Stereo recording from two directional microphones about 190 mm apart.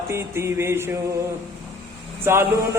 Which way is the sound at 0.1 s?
15° right (ahead or behind).